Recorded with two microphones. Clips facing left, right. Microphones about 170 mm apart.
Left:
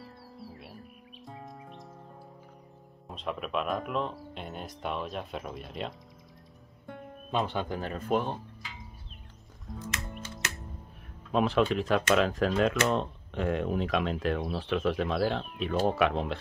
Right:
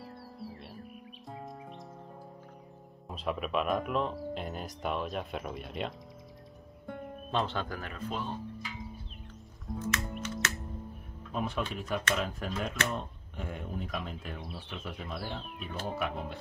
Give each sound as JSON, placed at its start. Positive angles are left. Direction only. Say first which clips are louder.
{"t": 0.0, "sound": "music", "louder": "right 2 dB", "side_deg": 0}
{"t": 3.1, "sound": "speech", "louder": "right 1 dB", "side_deg": 0}
{"t": 7.2, "sound": "speech", "louder": "left 2 dB", "side_deg": 10}
{"t": 7.9, "sound": "speech", "louder": "left 10 dB", "side_deg": 55}
{"t": 9.7, "sound": "music", "louder": "right 4 dB", "side_deg": 0}
{"t": 11.3, "sound": "speech", "louder": "left 9 dB", "side_deg": 90}